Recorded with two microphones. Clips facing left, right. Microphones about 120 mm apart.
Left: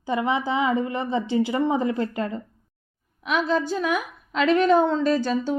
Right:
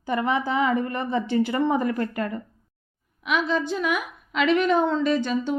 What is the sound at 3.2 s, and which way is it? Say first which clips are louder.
A woman's voice: left 1 dB; 40° left (ahead or behind).